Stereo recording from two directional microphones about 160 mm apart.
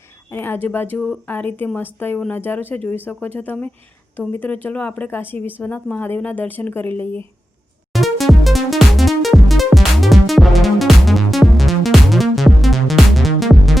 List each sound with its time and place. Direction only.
0.3 s speech: 15° left (ahead or behind)
7.9 s music: centre (ahead or behind)